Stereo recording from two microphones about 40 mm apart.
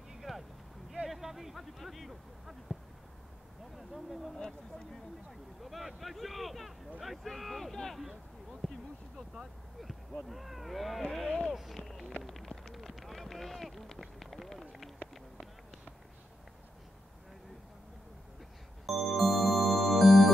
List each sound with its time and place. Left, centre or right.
0.1 s a sound: centre
3.7 s speech: centre
5.6 s speech: centre
8.0 s a sound: centre
9.3 s speech: centre
11.5 s speech: centre
11.8 s a sound: centre
12.2 s run: centre
18.9 s music: centre